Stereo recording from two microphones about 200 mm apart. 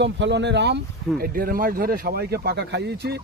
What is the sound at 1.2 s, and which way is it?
Speech, 45° right (ahead or behind).